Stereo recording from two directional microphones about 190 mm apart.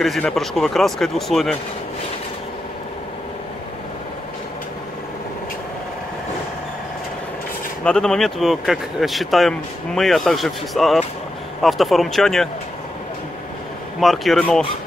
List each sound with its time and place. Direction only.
0.0 s speech: centre (ahead or behind)
7.8 s speech: 5° left (ahead or behind)
13.9 s speech: centre (ahead or behind)